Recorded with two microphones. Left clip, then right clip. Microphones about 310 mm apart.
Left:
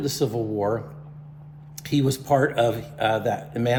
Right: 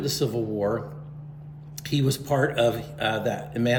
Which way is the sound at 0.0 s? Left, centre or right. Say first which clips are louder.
Left 1 dB; centre.